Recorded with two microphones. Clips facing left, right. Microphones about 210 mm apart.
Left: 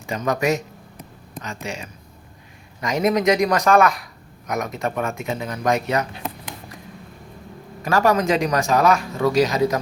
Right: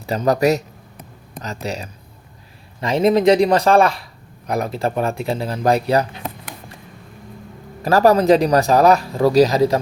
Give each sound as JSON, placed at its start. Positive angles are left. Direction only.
{"t": 0.0, "sound": "a man's voice", "side_deg": -35}
{"t": 7.8, "sound": "a man's voice", "side_deg": -35}